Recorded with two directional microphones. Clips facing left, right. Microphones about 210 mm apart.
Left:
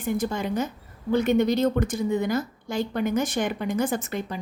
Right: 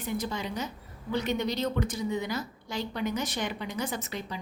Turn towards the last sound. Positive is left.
turn(degrees=50)  # may be behind; listen again after turning